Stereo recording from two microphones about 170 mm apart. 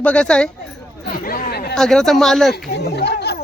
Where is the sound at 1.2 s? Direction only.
60° left (ahead or behind).